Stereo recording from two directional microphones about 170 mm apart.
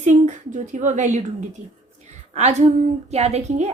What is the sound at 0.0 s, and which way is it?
Speech, 45° right (ahead or behind).